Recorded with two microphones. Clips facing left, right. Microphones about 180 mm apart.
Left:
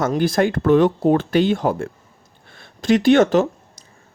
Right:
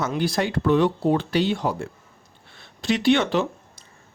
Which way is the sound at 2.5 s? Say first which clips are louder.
Left 7 dB; 50° left (ahead or behind).